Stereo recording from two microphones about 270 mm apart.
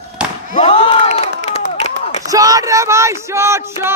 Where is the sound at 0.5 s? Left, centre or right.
Left.